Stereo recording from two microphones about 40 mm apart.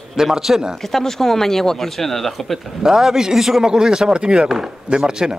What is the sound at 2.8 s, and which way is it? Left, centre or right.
Speech, centre.